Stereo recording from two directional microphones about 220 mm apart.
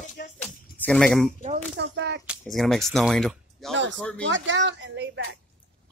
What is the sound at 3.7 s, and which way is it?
Speech, 55° right (ahead or behind).